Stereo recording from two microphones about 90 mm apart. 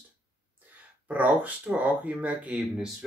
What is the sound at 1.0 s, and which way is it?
Speech, 15° right (ahead or behind).